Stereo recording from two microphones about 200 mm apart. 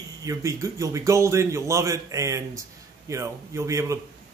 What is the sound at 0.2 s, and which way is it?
A man's voice, 15° right (ahead or behind).